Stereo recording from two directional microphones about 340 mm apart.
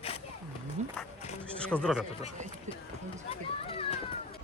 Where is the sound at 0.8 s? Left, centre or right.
Centre.